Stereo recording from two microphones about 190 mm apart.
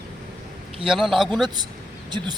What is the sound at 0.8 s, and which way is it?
Speech, centre (ahead or behind).